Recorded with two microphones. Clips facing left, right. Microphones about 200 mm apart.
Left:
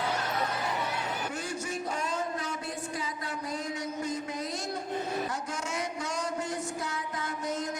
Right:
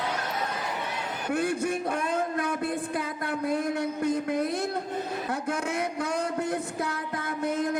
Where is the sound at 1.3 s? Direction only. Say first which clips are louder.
Right 8 dB; 60° right (ahead or behind).